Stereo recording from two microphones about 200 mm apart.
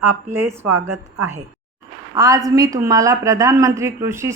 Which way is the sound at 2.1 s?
15° right (ahead or behind).